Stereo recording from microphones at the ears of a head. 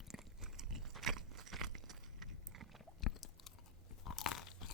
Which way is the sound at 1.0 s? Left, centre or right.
Right.